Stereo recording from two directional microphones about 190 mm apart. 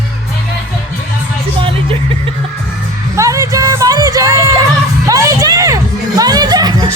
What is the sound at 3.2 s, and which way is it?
Music, 15° right (ahead or behind).